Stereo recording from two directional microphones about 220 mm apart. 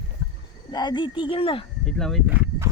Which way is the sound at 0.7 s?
20° left (ahead or behind).